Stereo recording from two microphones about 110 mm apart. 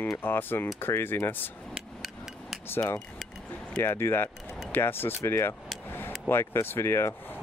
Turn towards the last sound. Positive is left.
turn(degrees=25)  # may be behind; listen again after turning